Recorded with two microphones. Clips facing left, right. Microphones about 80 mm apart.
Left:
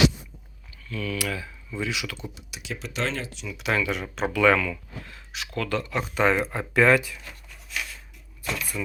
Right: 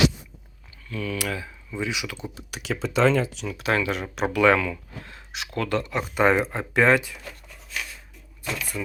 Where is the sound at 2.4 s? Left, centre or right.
Right.